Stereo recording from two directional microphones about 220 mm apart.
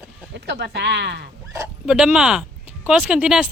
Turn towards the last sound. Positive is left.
turn(degrees=-5)  # may be behind; listen again after turning